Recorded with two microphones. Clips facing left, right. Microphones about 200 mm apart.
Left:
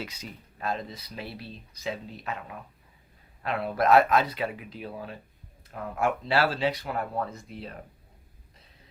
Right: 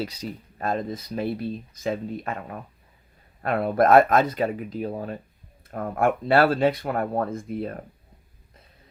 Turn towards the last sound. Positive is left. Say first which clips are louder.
# right 11 dB
turn(degrees=-50)  # may be behind; listen again after turning